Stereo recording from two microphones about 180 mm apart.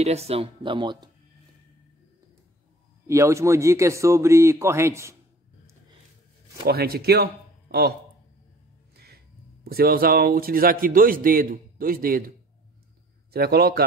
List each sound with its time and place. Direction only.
0.0 s speech: 35° right (ahead or behind)
3.1 s speech: 15° right (ahead or behind)
6.6 s speech: 60° right (ahead or behind)
8.9 s music: 60° right (ahead or behind)
9.7 s speech: 55° right (ahead or behind)
13.3 s a man's voice: 60° right (ahead or behind)